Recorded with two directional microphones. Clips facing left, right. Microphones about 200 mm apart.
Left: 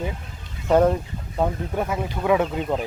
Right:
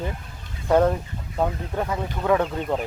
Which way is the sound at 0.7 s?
10° left (ahead or behind).